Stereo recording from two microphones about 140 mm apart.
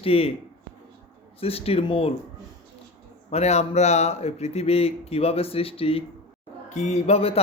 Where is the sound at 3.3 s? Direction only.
50° left (ahead or behind).